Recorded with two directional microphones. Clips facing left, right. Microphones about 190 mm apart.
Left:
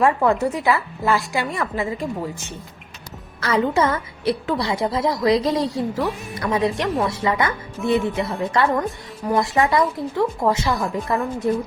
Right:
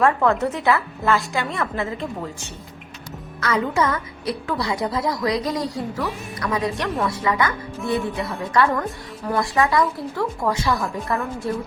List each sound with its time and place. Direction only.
0.0 s speech: 15° left (ahead or behind)
0.6 s speech: centre (ahead or behind)
1.3 s speech: 15° left (ahead or behind)
3.4 s a woman's voice: 30° left (ahead or behind)